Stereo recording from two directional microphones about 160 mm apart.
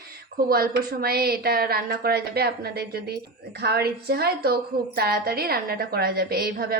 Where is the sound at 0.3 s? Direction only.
70° right (ahead or behind).